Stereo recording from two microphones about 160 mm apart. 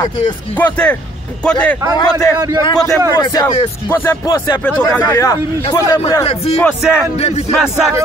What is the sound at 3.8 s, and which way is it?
A man's voice, 10° left (ahead or behind).